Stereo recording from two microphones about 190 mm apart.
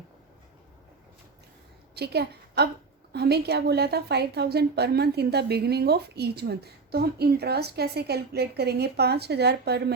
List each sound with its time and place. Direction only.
2.0 s a woman's voice: 60° right (ahead or behind)